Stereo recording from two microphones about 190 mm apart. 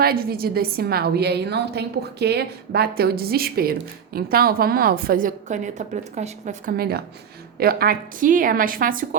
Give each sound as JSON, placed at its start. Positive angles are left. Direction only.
{"t": 0.0, "sound": "a woman's voice", "side_deg": -55}